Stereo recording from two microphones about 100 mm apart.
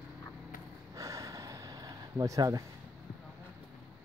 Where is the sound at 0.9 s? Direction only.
35° right (ahead or behind).